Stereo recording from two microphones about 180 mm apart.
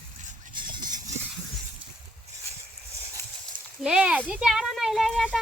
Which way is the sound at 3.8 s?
5° right (ahead or behind).